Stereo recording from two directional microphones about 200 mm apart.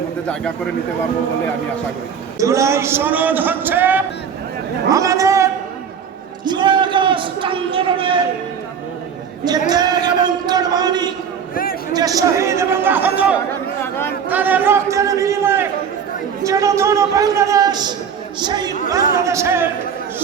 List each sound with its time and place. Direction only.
2.4 s a man's voice: 15° right (ahead or behind)
9.4 s speech: 20° right (ahead or behind)
10.2 s a sound: 20° right (ahead or behind)
11.5 s a sound: 45° left (ahead or behind)
11.9 s a man's voice: 15° right (ahead or behind)
13.8 s chatter: 10° left (ahead or behind)
14.3 s a man's voice: 10° right (ahead or behind)